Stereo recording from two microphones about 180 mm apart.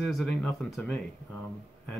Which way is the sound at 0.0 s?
Centre (ahead or behind).